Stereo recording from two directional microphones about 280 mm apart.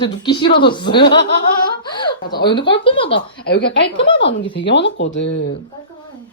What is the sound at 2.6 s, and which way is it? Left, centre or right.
Speech, left.